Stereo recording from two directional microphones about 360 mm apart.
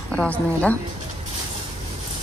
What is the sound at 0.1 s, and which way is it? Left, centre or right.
Speech, centre.